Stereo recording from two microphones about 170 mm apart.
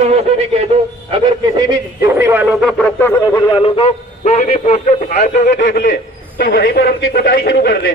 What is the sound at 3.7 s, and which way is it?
A man's voice, 35° left (ahead or behind).